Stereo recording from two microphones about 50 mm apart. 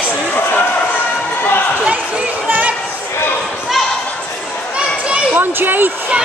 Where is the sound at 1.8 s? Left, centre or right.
Right.